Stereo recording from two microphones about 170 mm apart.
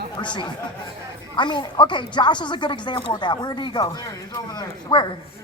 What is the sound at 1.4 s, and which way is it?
Speech, 25° left (ahead or behind).